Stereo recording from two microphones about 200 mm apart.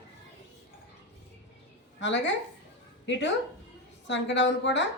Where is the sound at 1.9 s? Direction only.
65° left (ahead or behind).